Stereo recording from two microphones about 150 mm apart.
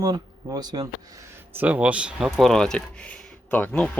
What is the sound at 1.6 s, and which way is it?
Speech, 10° right (ahead or behind).